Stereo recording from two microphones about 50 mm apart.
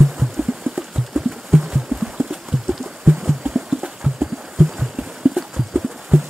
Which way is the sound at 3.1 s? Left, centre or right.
Centre.